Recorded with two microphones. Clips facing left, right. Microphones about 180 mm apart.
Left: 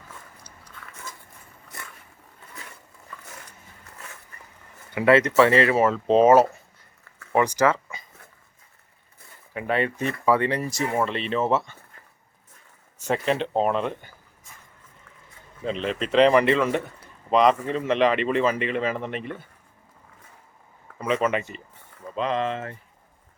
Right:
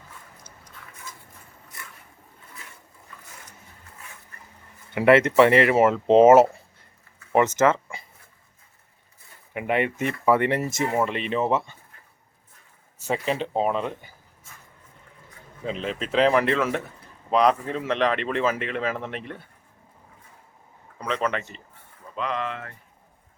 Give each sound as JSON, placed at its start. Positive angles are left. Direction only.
{"t": 4.9, "sound": "speech", "side_deg": -25}
{"t": 9.5, "sound": "speech", "side_deg": -20}
{"t": 13.0, "sound": "speech", "side_deg": -5}
{"t": 15.6, "sound": "speech", "side_deg": -5}
{"t": 21.0, "sound": "speech", "side_deg": 5}
{"t": 22.1, "sound": "speech", "side_deg": 25}